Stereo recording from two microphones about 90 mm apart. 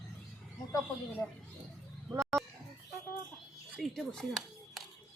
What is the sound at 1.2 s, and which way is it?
Speech, 10° left (ahead or behind).